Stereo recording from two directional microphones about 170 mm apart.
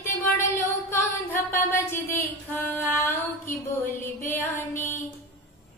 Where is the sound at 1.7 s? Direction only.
15° left (ahead or behind).